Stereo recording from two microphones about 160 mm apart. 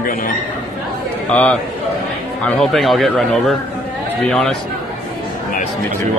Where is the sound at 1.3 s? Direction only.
10° left (ahead or behind).